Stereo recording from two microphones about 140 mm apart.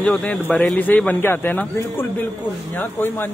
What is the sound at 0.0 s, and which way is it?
A man's voice, 10° left (ahead or behind).